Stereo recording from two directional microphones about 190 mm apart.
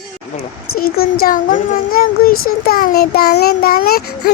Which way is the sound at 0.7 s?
50° left (ahead or behind).